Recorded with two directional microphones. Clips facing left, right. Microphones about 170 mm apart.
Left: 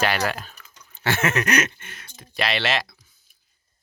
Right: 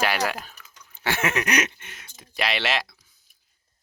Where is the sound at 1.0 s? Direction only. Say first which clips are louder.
Left 2 dB; 15° right (ahead or behind).